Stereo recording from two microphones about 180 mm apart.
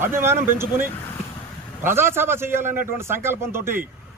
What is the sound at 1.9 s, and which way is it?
Speech, 15° right (ahead or behind).